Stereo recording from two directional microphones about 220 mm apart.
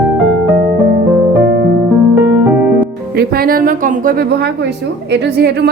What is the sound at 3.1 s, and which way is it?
A woman's voice, 45° right (ahead or behind).